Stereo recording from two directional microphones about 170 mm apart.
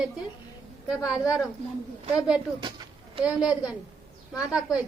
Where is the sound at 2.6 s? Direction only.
25° right (ahead or behind).